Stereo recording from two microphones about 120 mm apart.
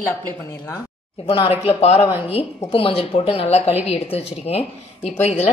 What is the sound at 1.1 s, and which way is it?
Speech, 50° left (ahead or behind).